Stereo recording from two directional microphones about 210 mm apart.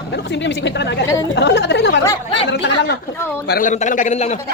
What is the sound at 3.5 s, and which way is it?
Speech, 40° left (ahead or behind).